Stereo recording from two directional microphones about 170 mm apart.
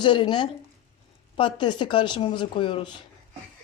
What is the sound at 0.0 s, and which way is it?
Speech, 30° left (ahead or behind).